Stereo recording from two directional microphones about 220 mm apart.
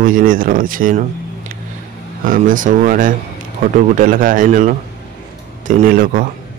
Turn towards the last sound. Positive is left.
turn(degrees=-40)  # may be behind; listen again after turning